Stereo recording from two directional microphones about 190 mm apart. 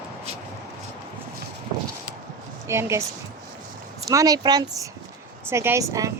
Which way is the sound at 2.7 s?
15° right (ahead or behind).